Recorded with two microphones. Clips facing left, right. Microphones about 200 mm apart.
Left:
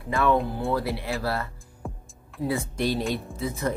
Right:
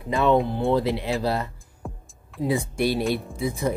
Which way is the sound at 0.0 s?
20° right (ahead or behind).